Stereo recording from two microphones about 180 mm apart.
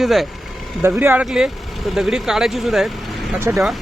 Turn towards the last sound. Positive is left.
turn(degrees=0)  # may be behind; listen again after turning